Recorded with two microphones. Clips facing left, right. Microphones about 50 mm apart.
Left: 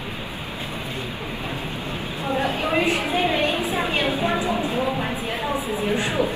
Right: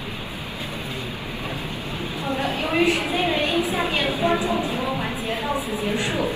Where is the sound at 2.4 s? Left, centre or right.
Left.